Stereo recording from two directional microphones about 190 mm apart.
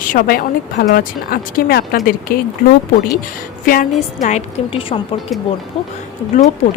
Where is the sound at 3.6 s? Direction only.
50° left (ahead or behind).